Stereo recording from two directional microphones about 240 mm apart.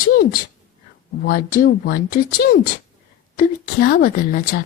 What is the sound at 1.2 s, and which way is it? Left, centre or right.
Speech, left.